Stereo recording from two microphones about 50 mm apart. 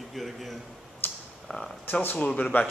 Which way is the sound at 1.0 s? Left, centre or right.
Left.